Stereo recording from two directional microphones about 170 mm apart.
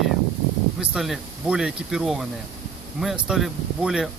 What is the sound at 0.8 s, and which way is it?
A man's voice, 5° right (ahead or behind).